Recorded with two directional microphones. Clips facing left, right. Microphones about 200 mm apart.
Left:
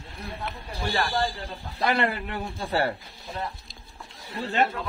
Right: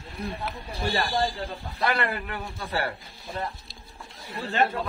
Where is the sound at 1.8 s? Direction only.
25° left (ahead or behind).